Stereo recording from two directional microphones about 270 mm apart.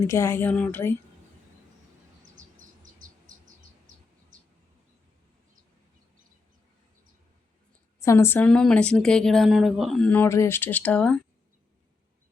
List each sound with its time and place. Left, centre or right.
0.1 s a woman's voice: centre
2.3 s insect: right
7.9 s a woman's voice: centre